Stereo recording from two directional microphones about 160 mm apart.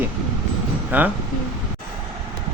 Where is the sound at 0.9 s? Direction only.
10° right (ahead or behind).